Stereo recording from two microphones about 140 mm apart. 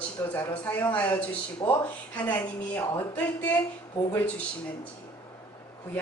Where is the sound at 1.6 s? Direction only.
30° left (ahead or behind).